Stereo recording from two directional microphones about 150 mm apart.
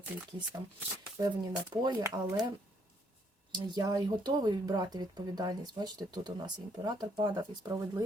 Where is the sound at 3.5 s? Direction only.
30° right (ahead or behind).